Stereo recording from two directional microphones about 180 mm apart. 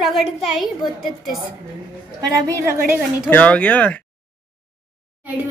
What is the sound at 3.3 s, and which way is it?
Speech, 10° left (ahead or behind).